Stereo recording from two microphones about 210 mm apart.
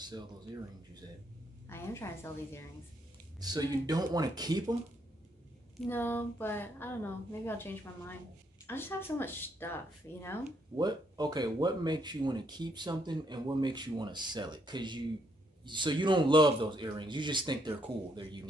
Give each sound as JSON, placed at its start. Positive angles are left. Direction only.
{"t": 1.7, "sound": "speech", "side_deg": 10}
{"t": 3.3, "sound": "speech", "side_deg": -20}
{"t": 5.8, "sound": "speech", "side_deg": 10}
{"t": 10.8, "sound": "speech", "side_deg": -20}